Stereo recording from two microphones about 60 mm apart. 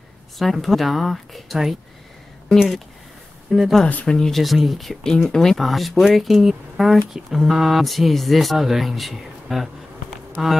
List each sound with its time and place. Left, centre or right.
0.4 s speech: centre
3.5 s speech: centre
3.8 s speech: centre
4.3 s speech: centre